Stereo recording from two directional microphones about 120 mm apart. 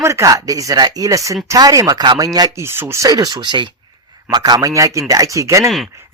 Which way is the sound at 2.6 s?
20° right (ahead or behind).